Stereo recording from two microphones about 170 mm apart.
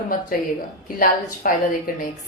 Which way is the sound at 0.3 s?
55° left (ahead or behind).